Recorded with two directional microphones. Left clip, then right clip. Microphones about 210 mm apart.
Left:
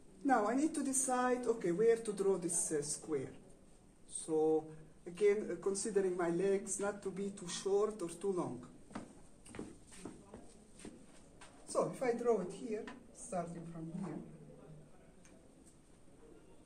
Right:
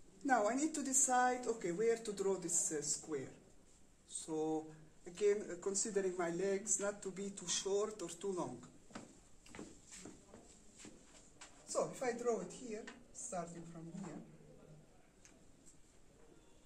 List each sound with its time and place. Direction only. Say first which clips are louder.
0.3 s speech: left 2 dB; 30° right (ahead or behind)
4.1 s a sound: left 7 dB; 20° right (ahead or behind)
5.1 s speech: left 3 dB; 25° right (ahead or behind)
8.9 s tick-tock: left 4 dB; 5° right (ahead or behind)
10.0 s a sound: left 7 dB; 5° left (ahead or behind)
11.7 s a woman's voice: left 4 dB; 5° left (ahead or behind)